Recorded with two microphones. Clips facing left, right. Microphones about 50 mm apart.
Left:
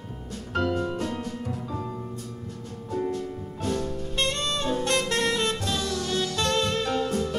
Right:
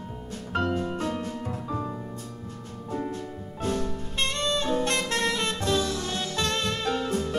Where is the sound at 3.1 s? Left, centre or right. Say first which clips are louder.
Left 4 dB; right.